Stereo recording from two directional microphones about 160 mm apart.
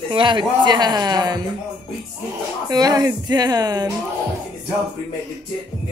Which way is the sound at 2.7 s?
25° right (ahead or behind).